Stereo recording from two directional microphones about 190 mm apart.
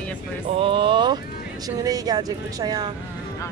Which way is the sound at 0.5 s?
25° right (ahead or behind).